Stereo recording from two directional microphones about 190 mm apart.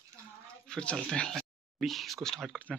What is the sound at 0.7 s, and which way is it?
Speech, 5° left (ahead or behind).